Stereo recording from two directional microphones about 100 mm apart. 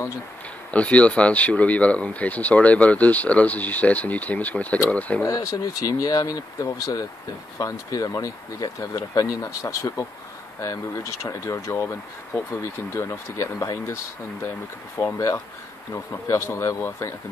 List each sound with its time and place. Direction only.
0.7 s speech: 15° left (ahead or behind)
5.2 s speech: 30° left (ahead or behind)
11.2 s speech: 30° left (ahead or behind)
15.0 s speech: 30° left (ahead or behind)